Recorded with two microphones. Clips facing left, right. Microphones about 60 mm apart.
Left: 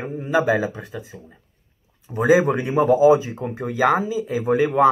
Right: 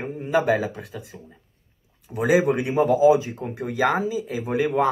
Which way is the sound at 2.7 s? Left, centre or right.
Centre.